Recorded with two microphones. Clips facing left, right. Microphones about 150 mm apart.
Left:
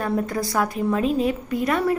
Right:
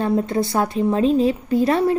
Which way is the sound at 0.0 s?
25° right (ahead or behind).